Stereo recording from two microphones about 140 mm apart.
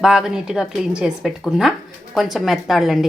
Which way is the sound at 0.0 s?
5° right (ahead or behind).